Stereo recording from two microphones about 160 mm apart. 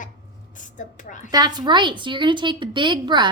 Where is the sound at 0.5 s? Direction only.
55° left (ahead or behind).